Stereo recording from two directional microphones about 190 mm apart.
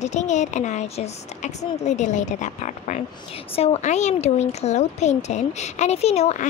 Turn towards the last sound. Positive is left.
turn(degrees=35)  # may be behind; listen again after turning